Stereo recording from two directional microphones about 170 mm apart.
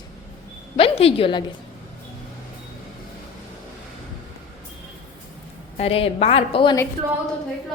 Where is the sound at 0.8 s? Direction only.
35° left (ahead or behind).